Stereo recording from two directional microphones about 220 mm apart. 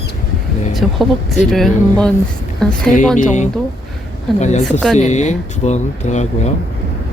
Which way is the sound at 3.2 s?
35° left (ahead or behind).